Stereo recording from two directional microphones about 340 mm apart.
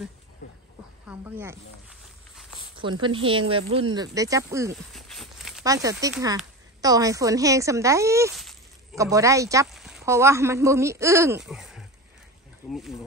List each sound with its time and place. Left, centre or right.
0.4 s a sound: left
1.0 s snake: centre
2.7 s speech: centre